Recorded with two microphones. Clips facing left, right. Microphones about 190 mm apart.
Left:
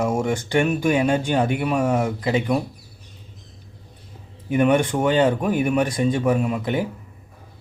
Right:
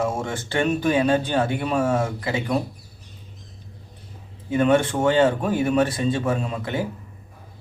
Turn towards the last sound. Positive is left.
turn(degrees=15)  # may be behind; listen again after turning